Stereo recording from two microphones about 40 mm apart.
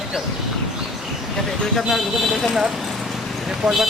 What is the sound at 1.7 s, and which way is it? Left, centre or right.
Speech, centre.